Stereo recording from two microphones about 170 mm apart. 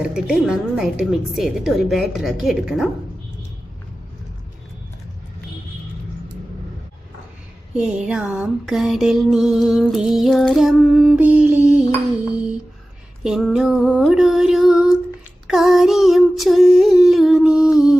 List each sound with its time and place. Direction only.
0.0 s music: 5° right (ahead or behind)
7.7 s music: 5° right (ahead or behind)
13.2 s female singing: 5° right (ahead or behind)
15.4 s a sound: 5° right (ahead or behind)